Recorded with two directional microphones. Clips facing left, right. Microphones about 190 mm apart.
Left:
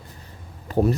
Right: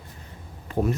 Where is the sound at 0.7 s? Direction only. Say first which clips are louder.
Left 4 dB; 40° left (ahead or behind).